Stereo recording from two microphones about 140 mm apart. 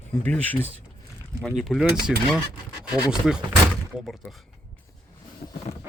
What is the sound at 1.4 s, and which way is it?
Speech, centre (ahead or behind).